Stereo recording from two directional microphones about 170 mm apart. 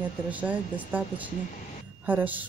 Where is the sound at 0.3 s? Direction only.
10° right (ahead or behind).